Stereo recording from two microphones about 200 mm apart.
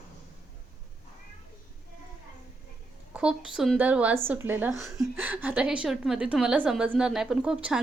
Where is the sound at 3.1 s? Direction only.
5° right (ahead or behind).